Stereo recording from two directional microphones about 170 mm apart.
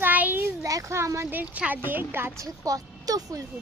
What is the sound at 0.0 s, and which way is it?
A child's voice, 10° right (ahead or behind).